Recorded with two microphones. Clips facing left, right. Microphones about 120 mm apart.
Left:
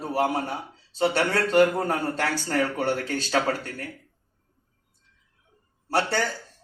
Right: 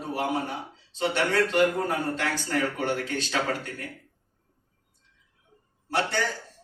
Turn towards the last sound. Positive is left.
turn(degrees=35)  # may be behind; listen again after turning